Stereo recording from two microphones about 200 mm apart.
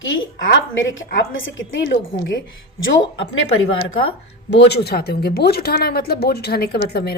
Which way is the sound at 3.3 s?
90° left.